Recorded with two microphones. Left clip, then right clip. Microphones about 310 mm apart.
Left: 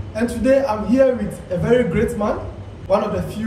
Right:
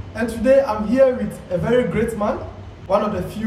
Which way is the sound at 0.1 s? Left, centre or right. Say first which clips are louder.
Right 1 dB; centre.